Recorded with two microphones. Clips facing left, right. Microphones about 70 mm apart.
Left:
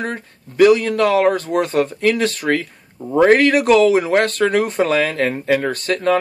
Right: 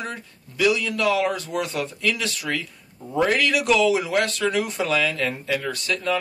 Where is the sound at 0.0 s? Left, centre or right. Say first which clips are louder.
Left 7 dB; left.